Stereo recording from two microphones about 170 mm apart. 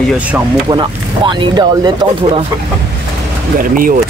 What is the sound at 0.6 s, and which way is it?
Speech, 25° right (ahead or behind).